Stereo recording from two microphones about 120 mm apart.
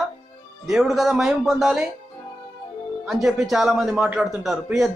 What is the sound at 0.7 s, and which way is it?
A man's voice, centre (ahead or behind).